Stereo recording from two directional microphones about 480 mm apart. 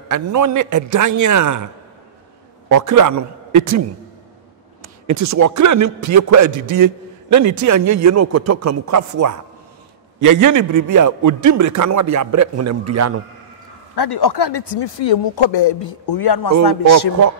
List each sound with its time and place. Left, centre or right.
0.1 s a man's voice: right
2.7 s a man's voice: right
4.8 s a man's voice: right
13.9 s a man's voice: left